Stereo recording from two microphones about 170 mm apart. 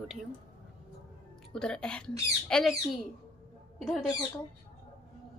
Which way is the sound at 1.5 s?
5° left (ahead or behind).